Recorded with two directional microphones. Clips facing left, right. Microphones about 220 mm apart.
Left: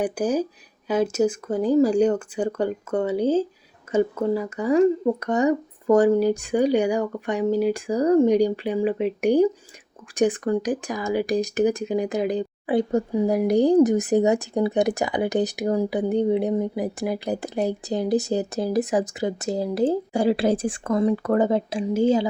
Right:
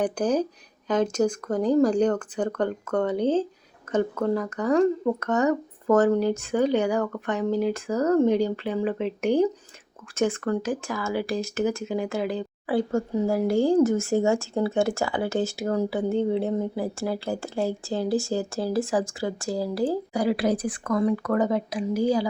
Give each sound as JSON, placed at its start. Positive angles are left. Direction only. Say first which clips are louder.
{"t": 0.0, "sound": "speech", "louder": "left 1 dB", "side_deg": 10}